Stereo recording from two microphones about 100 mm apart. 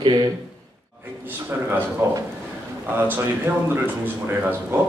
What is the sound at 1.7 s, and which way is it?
A man's voice, 25° right (ahead or behind).